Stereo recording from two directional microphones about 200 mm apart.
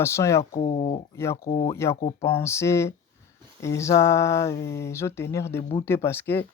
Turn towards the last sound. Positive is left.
turn(degrees=10)  # may be behind; listen again after turning